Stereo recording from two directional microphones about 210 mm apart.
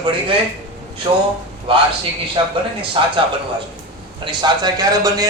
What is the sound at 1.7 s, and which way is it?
A man's voice, 25° right (ahead or behind).